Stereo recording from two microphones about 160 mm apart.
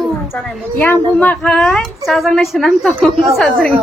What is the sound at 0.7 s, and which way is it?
Speech, 10° left (ahead or behind).